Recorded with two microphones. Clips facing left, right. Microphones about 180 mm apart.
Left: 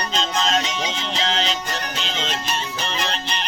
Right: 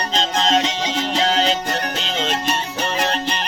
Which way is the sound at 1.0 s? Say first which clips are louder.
Right 8 dB; 40° right (ahead or behind).